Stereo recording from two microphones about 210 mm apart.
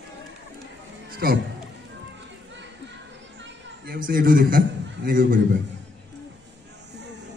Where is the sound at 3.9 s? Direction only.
45° right (ahead or behind).